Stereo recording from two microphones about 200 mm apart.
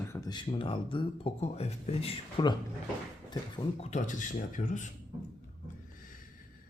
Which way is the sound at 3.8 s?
35° left (ahead or behind).